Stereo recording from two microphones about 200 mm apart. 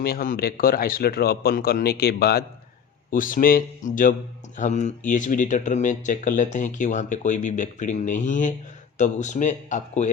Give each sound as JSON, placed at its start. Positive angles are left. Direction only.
{"t": 0.0, "sound": "speech", "side_deg": 45}